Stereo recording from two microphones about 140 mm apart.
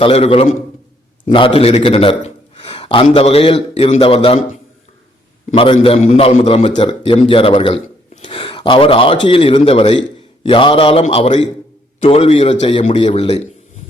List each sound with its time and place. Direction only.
0.0 s a man's voice: 40° left (ahead or behind)
1.2 s a man's voice: 35° left (ahead or behind)
5.7 s a man's voice: 50° left (ahead or behind)